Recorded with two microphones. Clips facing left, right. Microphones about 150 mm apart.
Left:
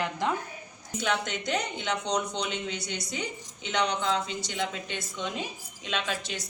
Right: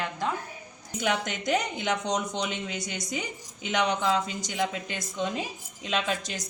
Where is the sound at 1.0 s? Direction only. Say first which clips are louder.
Right 1 dB; 50° right (ahead or behind).